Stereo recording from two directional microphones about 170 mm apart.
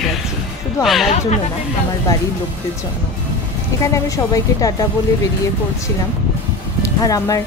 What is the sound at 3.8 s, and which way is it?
A woman's voice, 20° left (ahead or behind).